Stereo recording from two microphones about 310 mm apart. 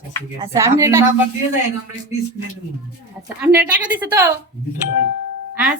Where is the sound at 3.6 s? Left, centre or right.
Centre.